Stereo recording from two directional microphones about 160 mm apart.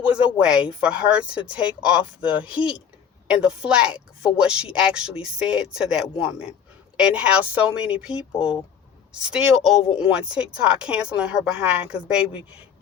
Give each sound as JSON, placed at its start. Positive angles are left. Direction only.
{"t": 0.0, "sound": "speech", "side_deg": -10}
{"t": 2.6, "sound": "speech", "side_deg": 35}
{"t": 3.2, "sound": "a woman's voice", "side_deg": -5}